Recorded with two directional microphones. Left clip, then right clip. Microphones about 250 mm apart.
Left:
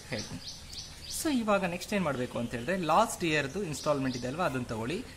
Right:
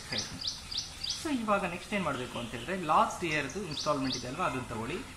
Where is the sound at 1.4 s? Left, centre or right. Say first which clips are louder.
Left 1 dB; left.